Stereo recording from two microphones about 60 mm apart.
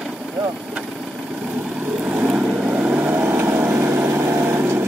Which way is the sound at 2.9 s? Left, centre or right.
Right.